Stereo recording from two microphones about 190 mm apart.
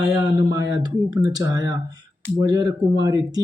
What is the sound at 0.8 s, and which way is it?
Speech, 20° right (ahead or behind).